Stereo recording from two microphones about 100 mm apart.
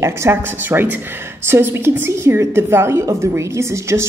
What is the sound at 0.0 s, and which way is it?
Speech, 25° right (ahead or behind).